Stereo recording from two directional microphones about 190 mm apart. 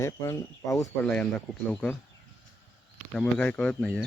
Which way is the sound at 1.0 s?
5° left (ahead or behind).